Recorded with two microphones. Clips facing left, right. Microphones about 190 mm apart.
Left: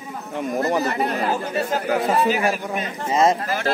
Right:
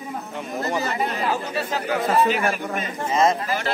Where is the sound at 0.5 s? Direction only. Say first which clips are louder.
Left 3 dB; 55° left (ahead or behind).